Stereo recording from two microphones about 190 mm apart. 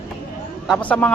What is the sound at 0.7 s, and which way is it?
Speech, 5° left (ahead or behind).